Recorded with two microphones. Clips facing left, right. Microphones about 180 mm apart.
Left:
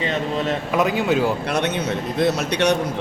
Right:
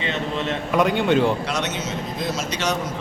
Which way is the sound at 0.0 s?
40° left (ahead or behind).